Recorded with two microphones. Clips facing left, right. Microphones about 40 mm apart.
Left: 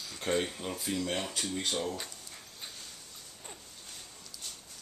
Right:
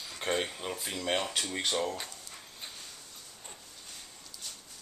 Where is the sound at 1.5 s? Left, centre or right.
Right.